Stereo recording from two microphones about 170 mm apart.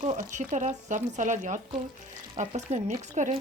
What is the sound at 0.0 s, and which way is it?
Speech, 45° right (ahead or behind).